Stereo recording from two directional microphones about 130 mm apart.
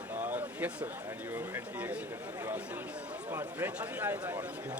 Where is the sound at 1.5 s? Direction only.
10° right (ahead or behind).